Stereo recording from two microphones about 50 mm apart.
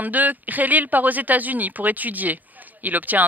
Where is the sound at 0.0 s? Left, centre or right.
Right.